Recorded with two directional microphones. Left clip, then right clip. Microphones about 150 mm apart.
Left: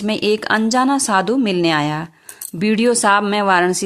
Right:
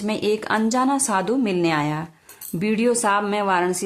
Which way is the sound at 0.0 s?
35° left (ahead or behind).